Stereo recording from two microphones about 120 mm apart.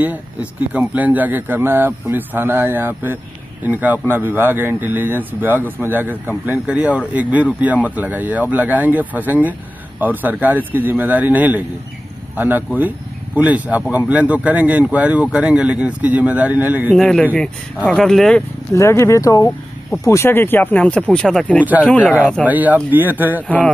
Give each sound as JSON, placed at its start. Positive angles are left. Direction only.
{"t": 0.0, "sound": "speech", "side_deg": -15}
{"t": 16.9, "sound": "speech", "side_deg": 5}
{"t": 18.7, "sound": "speech", "side_deg": 25}
{"t": 22.4, "sound": "speech", "side_deg": -15}
{"t": 23.4, "sound": "speech", "side_deg": 5}